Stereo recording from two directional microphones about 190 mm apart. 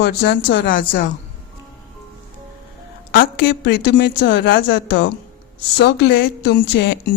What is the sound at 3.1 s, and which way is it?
Speech, 50° left (ahead or behind).